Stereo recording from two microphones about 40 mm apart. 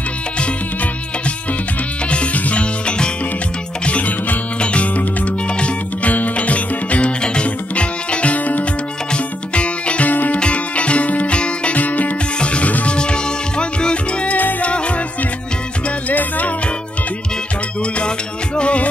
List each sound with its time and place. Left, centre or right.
2.0 s music: left
10.1 s music: left
10.4 s music: left
11.7 s music: left
12.4 s music: left
14.3 s music: left
16.1 s music: left
18.6 s music: left